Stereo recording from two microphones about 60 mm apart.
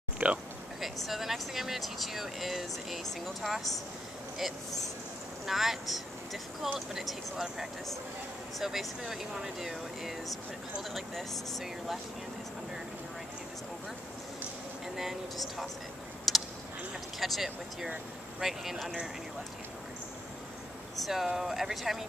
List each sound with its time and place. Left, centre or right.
0.2 s a sound: right
1.0 s speech: centre
5.5 s speech: centre
15.0 s speech: centre
16.3 s tick: centre
17.2 s speech: centre
21.0 s speech: centre